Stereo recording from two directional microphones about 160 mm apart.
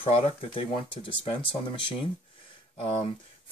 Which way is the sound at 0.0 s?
35° left (ahead or behind).